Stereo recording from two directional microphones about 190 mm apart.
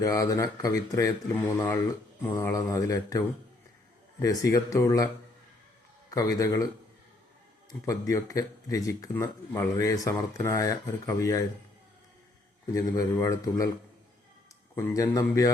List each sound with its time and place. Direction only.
0.0 s speech: 15° left (ahead or behind)
6.1 s speech: 15° left (ahead or behind)
7.7 s speech: 15° left (ahead or behind)
12.7 s speech: 15° left (ahead or behind)
14.8 s speech: 15° left (ahead or behind)